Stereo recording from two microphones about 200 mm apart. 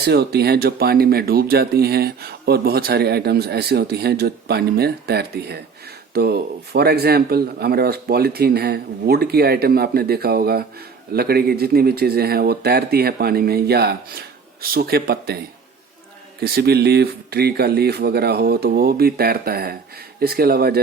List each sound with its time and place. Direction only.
0.0 s speech: 55° right (ahead or behind)
16.4 s speech: 50° right (ahead or behind)